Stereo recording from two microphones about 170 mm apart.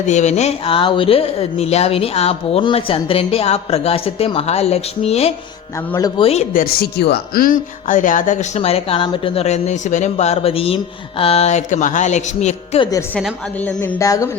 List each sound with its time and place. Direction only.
0.1 s speech: 40° left (ahead or behind)
6.5 s speech: 60° left (ahead or behind); by 12.8 s 40° left (ahead or behind)
12.8 s speech: 20° left (ahead or behind)
13.1 s a woman's voice: 5° left (ahead or behind)
14.0 s speech: 20° left (ahead or behind)